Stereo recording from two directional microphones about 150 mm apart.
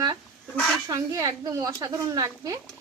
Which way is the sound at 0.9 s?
20° right (ahead or behind).